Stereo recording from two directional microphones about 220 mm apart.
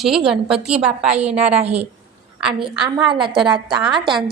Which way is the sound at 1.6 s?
30° right (ahead or behind).